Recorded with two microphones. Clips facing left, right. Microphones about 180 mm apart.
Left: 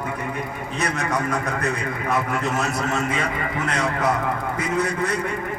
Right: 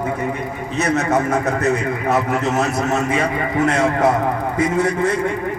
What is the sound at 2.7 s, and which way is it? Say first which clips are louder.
A man's voice: right 5 dB; 25° right (ahead or behind).